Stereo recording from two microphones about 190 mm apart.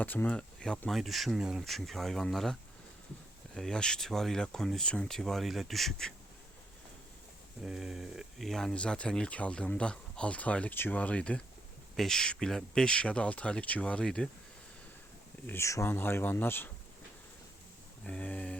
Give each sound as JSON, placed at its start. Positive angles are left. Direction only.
{"t": 0.0, "sound": "speech", "side_deg": 10}
{"t": 7.6, "sound": "speech", "side_deg": -5}
{"t": 15.4, "sound": "speech", "side_deg": 15}
{"t": 18.0, "sound": "speech", "side_deg": 5}